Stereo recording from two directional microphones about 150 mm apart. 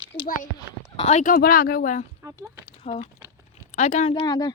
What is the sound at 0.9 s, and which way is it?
Speech, 45° left (ahead or behind).